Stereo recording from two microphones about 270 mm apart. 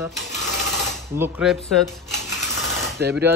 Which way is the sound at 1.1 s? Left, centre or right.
Centre.